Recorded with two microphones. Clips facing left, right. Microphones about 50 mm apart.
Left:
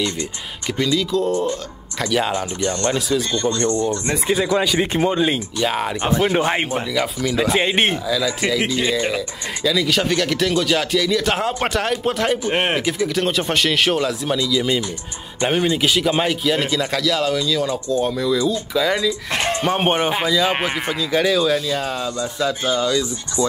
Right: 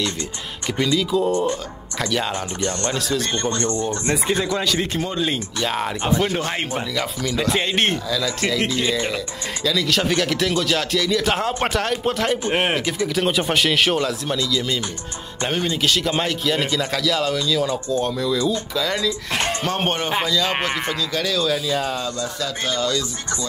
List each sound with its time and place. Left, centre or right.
0.8 s speech: centre
2.0 s speech: centre
2.6 s speech: left
3.3 s speech: right
4.1 s speech: centre
6.3 s speech: left
6.7 s speech: centre
7.6 s speech: centre
7.9 s speech: centre
21.5 s speech: centre
22.2 s speech: centre